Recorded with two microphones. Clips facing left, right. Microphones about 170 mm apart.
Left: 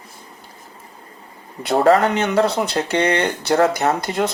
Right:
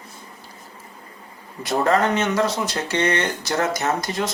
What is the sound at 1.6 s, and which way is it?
Speech, 60° left (ahead or behind).